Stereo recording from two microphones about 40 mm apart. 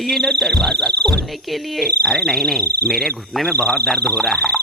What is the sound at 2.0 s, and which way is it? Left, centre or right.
Frog, left.